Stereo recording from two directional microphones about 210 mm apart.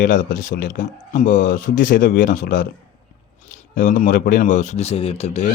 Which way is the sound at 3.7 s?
40° left (ahead or behind).